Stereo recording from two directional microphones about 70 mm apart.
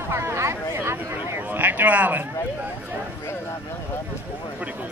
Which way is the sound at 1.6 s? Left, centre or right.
Right.